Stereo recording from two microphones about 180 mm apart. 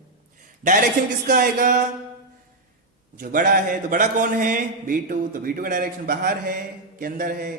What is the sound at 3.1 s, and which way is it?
A man's voice, 50° right (ahead or behind).